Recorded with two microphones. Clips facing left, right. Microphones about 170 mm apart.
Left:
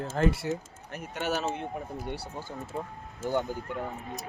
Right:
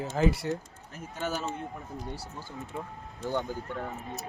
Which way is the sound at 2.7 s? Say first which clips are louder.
Left 3 dB; 35° left (ahead or behind).